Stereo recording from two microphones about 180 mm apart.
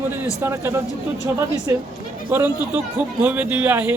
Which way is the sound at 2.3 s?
10° right (ahead or behind).